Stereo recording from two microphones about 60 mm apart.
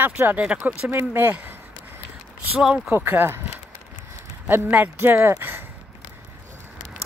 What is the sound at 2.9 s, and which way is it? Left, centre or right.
Speech, right.